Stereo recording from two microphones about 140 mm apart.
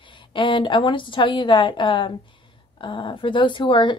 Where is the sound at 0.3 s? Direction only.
35° left (ahead or behind).